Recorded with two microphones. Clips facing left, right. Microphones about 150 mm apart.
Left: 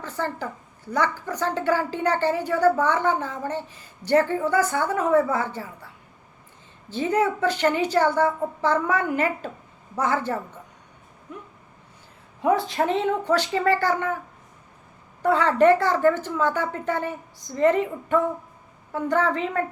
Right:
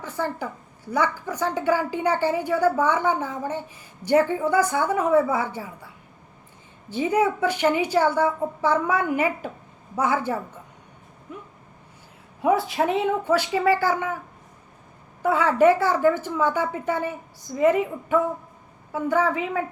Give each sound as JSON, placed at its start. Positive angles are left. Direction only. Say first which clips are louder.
{"t": 0.0, "sound": "a woman's voice", "louder": "right 1 dB", "side_deg": -10}
{"t": 6.9, "sound": "a woman's voice", "louder": "right 1 dB", "side_deg": -10}
{"t": 12.4, "sound": "a woman's voice", "louder": "even", "side_deg": -10}
{"t": 15.2, "sound": "a woman's voice", "louder": "even", "side_deg": -10}